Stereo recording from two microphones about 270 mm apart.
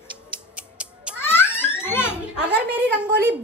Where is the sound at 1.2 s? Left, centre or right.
Centre.